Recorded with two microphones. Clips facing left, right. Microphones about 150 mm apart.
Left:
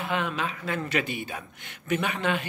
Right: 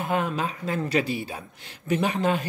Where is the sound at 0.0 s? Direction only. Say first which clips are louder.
Right 3 dB; 40° right (ahead or behind).